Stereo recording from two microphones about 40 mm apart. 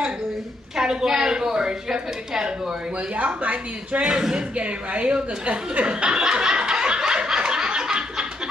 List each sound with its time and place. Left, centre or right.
0.7 s a woman's voice: centre
3.2 s a woman's voice: right
4.0 s speech: right
4.6 s speech: right
6.9 s snicker: right